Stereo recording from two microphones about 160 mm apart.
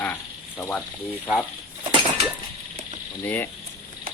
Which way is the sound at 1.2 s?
10° left (ahead or behind).